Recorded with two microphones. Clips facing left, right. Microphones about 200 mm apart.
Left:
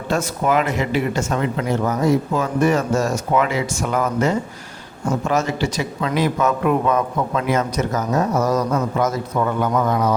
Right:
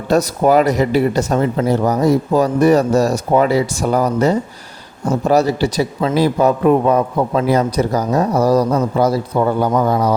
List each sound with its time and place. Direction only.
0.1 s speech: 35° right (ahead or behind)